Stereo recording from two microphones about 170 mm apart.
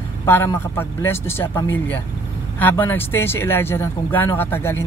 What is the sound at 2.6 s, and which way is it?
Speech, 10° left (ahead or behind).